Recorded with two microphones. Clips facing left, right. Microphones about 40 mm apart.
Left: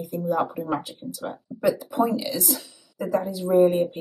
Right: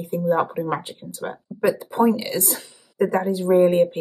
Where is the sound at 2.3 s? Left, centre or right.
Right.